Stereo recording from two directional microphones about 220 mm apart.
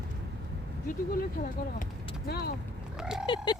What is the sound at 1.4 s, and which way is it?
Speech, 35° left (ahead or behind).